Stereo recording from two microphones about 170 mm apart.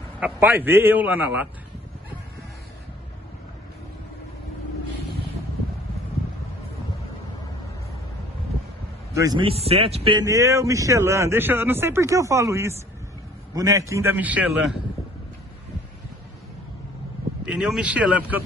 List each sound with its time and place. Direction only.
0.2 s a man's voice: 10° right (ahead or behind)
9.1 s a man's voice: 20° right (ahead or behind)
9.5 s speech: 35° right (ahead or behind)
10.1 s a man's voice: 20° right (ahead or behind)
17.5 s a man's voice: 5° right (ahead or behind)